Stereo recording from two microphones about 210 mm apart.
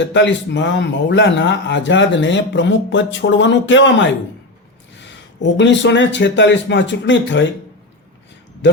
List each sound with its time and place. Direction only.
0.0 s speech: 60° left (ahead or behind)
4.9 s speech: 60° left (ahead or behind)